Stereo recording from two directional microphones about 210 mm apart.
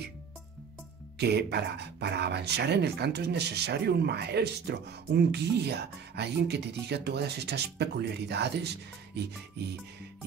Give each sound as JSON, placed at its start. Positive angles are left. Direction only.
{"t": 1.1, "sound": "speech", "side_deg": -50}